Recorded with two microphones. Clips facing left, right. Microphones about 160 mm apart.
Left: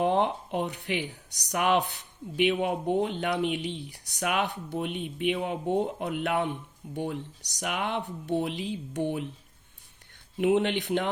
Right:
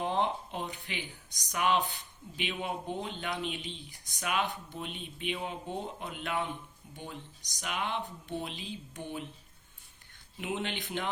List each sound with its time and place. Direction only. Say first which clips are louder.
0.0 s speech: left 6 dB; 60° left (ahead or behind)
10.3 s speech: left 12 dB; 60° left (ahead or behind)